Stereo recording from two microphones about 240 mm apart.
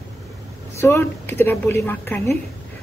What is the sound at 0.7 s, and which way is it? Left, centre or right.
A woman's voice, centre.